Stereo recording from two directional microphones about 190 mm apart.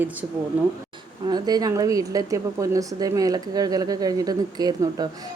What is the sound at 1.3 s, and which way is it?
A woman's voice, 20° right (ahead or behind).